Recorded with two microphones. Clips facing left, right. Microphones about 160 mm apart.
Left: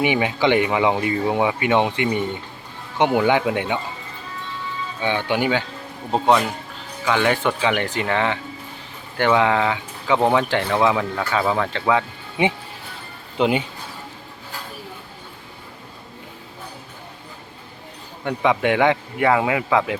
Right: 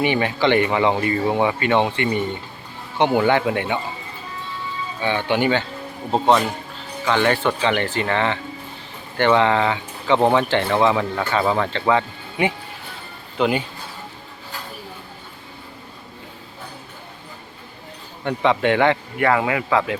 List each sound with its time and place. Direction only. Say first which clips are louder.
0.0 s speech: even; 10° left (ahead or behind)
5.0 s speech: right 1 dB; 10° left (ahead or behind)
13.4 s speech: left 1 dB; 20° left (ahead or behind)
18.3 s speech: right 1 dB; 10° left (ahead or behind)